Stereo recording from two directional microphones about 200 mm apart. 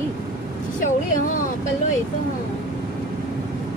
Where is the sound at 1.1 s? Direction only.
40° left (ahead or behind).